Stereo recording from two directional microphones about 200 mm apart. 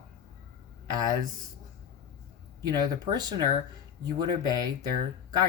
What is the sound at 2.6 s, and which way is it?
Speech, 20° right (ahead or behind).